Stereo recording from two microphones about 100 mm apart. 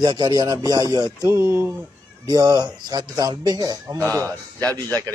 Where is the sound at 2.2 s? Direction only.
40° right (ahead or behind).